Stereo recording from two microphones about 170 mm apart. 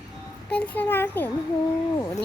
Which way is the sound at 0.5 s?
10° left (ahead or behind).